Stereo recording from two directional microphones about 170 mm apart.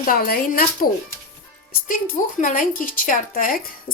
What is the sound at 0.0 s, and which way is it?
Speech, 55° left (ahead or behind).